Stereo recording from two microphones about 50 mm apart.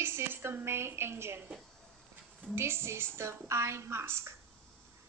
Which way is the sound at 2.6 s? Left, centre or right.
Right.